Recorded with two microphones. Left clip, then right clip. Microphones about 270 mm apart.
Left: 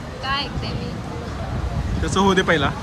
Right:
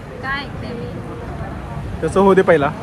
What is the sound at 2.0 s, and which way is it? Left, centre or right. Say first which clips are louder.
Speech: right 6 dB; centre.